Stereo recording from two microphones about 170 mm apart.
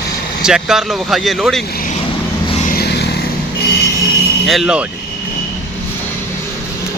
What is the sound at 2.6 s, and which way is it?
Vehicle, 60° left (ahead or behind).